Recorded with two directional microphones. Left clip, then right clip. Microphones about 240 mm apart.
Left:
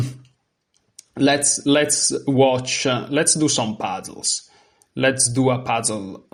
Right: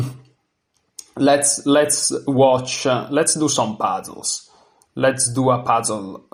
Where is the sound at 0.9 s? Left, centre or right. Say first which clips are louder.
Right 3 dB; left.